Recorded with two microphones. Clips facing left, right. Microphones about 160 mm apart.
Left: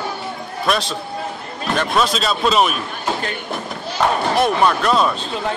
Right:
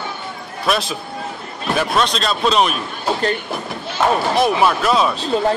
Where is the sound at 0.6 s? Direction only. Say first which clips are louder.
Right 1 dB; 5° right (ahead or behind).